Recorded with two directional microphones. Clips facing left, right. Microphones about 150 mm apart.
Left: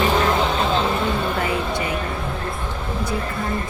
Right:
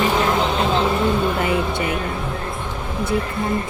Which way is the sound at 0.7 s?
15° right (ahead or behind).